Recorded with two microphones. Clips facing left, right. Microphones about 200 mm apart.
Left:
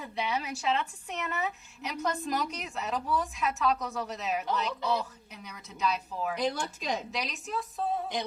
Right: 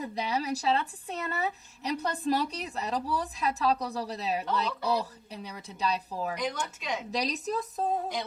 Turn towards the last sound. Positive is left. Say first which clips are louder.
# right 3 dB
turn(degrees=-40)  # may be behind; listen again after turning